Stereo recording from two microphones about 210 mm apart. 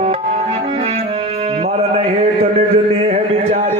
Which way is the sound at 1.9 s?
30° right (ahead or behind).